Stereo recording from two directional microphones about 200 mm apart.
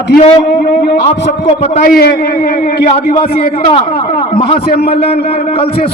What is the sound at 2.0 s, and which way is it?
A man's voice, 50° left (ahead or behind).